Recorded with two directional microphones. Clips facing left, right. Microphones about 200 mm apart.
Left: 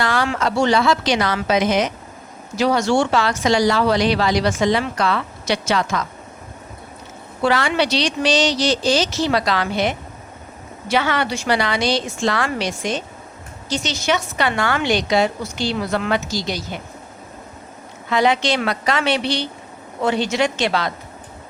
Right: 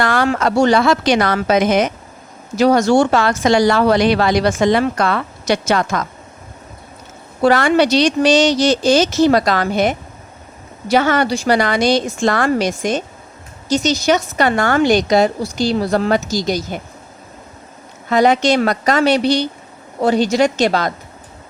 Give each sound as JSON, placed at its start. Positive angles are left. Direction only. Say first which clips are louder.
{"t": 0.0, "sound": "speech", "louder": "right 4 dB", "side_deg": -50}
{"t": 7.4, "sound": "speech", "louder": "right 6 dB", "side_deg": -45}
{"t": 10.9, "sound": "a woman's voice", "louder": "right 5 dB", "side_deg": -45}
{"t": 18.1, "sound": "a woman's voice", "louder": "right 5 dB", "side_deg": -45}